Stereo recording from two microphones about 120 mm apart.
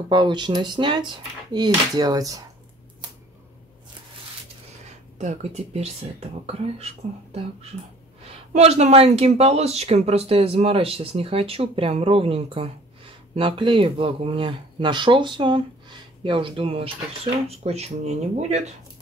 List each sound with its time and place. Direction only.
0.1 s speech: 40° right (ahead or behind)
5.2 s speech: 70° right (ahead or behind)
8.2 s speech: 60° right (ahead or behind)